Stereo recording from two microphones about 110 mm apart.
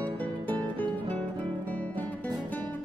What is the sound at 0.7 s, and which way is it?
Music, 15° left (ahead or behind).